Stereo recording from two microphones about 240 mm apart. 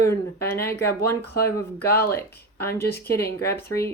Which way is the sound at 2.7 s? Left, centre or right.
Left.